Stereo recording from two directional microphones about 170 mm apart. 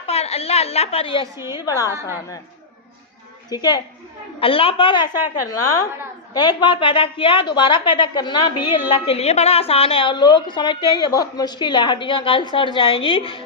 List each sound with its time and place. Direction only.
0.1 s a woman's voice: 35° left (ahead or behind)
1.4 s a woman's voice: 15° right (ahead or behind)
1.6 s a woman's voice: 20° left (ahead or behind)
3.5 s a woman's voice: 25° left (ahead or behind)
4.4 s a woman's voice: 35° left (ahead or behind)